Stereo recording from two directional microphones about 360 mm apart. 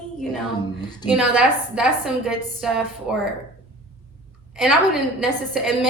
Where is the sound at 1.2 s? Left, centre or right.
Centre.